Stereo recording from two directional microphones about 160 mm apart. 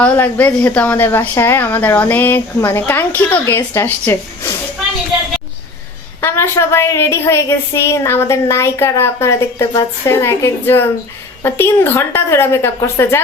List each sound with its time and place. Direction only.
0.0 s a woman's voice: 10° left (ahead or behind)
6.2 s a woman's voice: 15° left (ahead or behind)